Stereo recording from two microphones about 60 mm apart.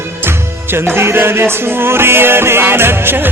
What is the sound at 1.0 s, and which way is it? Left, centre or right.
Music, right.